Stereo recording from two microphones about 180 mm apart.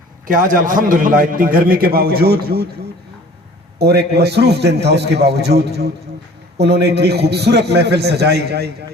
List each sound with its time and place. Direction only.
0.3 s a man's voice: 50° right (ahead or behind)
3.8 s a man's voice: 65° right (ahead or behind)